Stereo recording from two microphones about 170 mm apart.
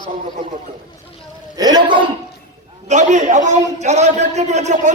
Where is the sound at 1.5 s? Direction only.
25° right (ahead or behind).